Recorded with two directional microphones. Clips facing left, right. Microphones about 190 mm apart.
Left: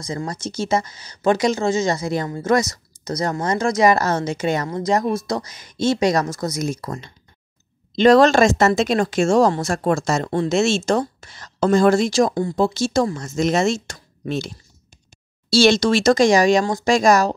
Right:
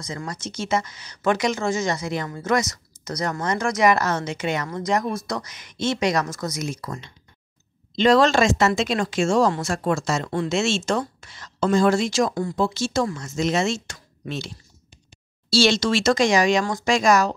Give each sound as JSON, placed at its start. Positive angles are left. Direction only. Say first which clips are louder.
{"t": 0.0, "sound": "a woman's voice", "louder": "left 5 dB", "side_deg": 30}
{"t": 15.5, "sound": "a woman's voice", "louder": "left 4 dB", "side_deg": 45}